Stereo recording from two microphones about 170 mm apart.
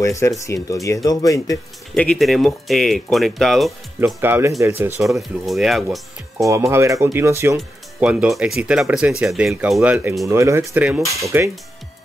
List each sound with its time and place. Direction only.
0.0 s speech: 15° left (ahead or behind)
2.0 s speech: 5° left (ahead or behind)
4.0 s speech: 10° right (ahead or behind)
5.1 s speech: centre (ahead or behind)
6.3 s speech: 15° right (ahead or behind)